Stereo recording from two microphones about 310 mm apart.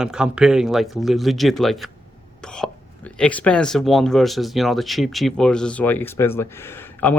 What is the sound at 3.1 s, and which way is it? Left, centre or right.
Speech, centre.